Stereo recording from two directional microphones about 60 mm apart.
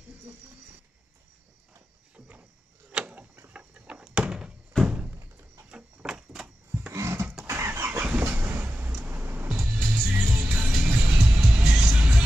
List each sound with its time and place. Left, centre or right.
2.1 s a sound: right
3.5 s door: centre
4.8 s thunk: right
5.7 s sliding door: centre
6.9 s a sound: right
7.4 s vehicle: right
8.0 s train: right
9.7 s music: right
10.7 s music: centre